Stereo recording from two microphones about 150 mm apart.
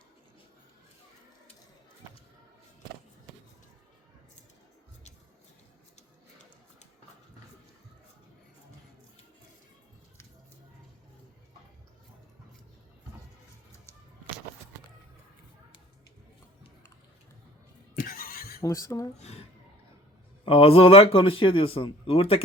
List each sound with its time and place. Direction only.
18.0 s neigh: 75° left (ahead or behind)
18.6 s speech: 20° left (ahead or behind)
19.2 s a man's voice: 45° left (ahead or behind)